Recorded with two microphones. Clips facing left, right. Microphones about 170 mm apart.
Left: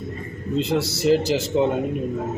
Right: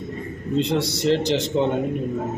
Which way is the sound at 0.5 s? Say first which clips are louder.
Right 1 dB; 5° left (ahead or behind).